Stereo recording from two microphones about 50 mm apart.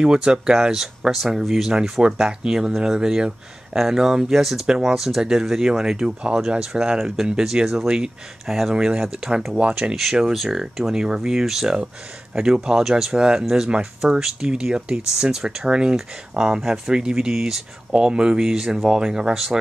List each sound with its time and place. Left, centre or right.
0.0 s speech: centre
4.6 s speech: centre
9.6 s speech: right
10.3 s speech: centre